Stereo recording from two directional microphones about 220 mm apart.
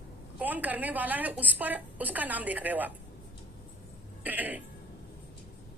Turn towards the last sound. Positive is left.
turn(degrees=-5)  # may be behind; listen again after turning